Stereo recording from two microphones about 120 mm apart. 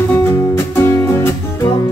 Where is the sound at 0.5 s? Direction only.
20° left (ahead or behind).